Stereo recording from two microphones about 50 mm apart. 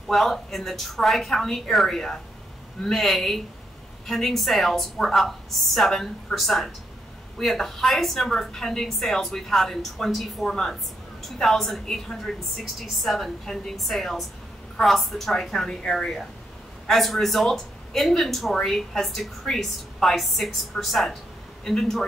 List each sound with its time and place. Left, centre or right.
0.1 s a woman's voice: centre